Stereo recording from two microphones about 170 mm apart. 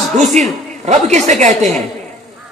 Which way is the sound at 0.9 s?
45° right (ahead or behind).